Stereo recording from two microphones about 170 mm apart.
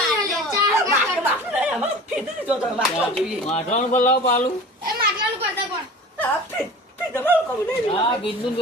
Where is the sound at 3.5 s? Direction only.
40° left (ahead or behind).